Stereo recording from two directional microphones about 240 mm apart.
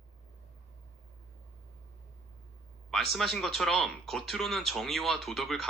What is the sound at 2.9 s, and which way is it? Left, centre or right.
Speech, centre.